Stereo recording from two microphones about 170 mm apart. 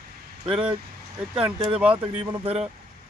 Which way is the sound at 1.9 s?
30° right (ahead or behind).